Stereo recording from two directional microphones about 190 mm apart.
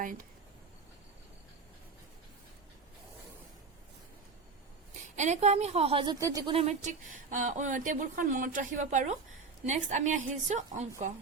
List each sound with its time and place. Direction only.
0.0 s speech: 45° right (ahead or behind)
5.1 s speech: 35° right (ahead or behind)
6.1 s speech: 20° right (ahead or behind)
6.5 s speech: 35° right (ahead or behind)